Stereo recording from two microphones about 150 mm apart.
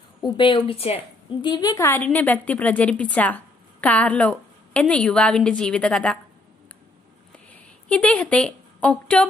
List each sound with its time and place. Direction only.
0.2 s a woman's voice: 30° left (ahead or behind)
1.8 s a woman's voice: 15° left (ahead or behind)
7.9 s a woman's voice: 10° left (ahead or behind)